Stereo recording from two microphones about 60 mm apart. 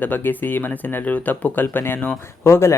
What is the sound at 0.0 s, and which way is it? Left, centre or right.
Speech, left.